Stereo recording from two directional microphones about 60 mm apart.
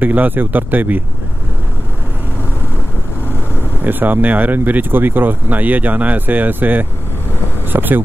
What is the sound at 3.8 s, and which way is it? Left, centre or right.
Speech, right.